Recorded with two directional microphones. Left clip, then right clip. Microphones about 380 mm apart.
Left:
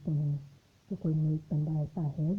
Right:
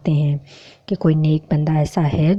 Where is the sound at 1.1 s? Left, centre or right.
Right.